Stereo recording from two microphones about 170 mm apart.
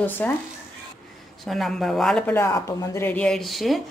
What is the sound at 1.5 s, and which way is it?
Speech, centre (ahead or behind).